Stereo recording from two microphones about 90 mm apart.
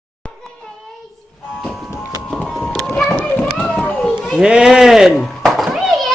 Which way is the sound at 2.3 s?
5° left (ahead or behind).